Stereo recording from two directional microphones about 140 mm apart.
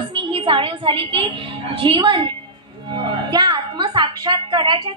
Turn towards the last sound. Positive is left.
turn(degrees=-35)  # may be behind; listen again after turning